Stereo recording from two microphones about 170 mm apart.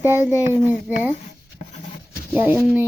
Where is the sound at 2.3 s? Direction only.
10° right (ahead or behind).